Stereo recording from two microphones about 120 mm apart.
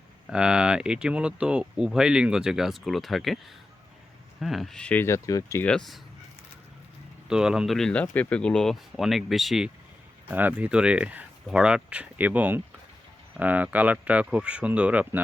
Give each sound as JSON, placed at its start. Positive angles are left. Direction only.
{"t": 0.3, "sound": "speech", "side_deg": -5}
{"t": 4.4, "sound": "speech", "side_deg": 0}
{"t": 5.0, "sound": "speech", "side_deg": 25}
{"t": 5.6, "sound": "speech", "side_deg": 5}
{"t": 7.3, "sound": "speech", "side_deg": -5}